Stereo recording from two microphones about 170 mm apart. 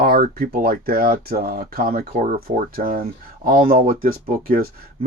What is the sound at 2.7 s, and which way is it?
Speech, 60° right (ahead or behind).